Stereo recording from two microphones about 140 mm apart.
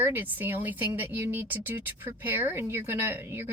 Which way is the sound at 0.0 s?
15° right (ahead or behind).